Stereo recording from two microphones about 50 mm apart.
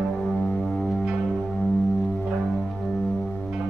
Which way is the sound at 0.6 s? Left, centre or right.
Centre.